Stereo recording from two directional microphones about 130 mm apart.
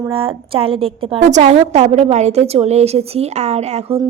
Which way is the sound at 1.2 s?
65° right (ahead or behind).